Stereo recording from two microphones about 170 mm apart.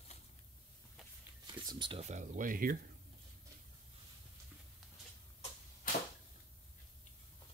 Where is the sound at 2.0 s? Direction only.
45° right (ahead or behind).